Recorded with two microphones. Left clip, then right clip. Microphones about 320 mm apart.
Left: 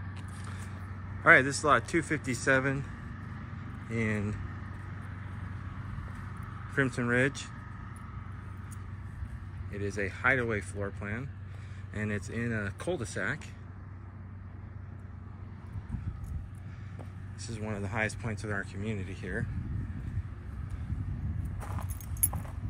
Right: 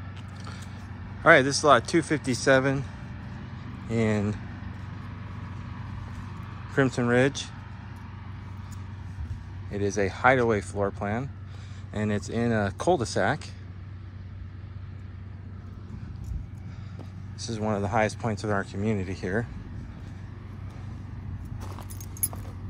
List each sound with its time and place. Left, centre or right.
1.2 s speech: centre
3.9 s speech: centre
5.1 s vehicle: right
6.7 s speech: centre
9.7 s speech: centre
17.4 s speech: centre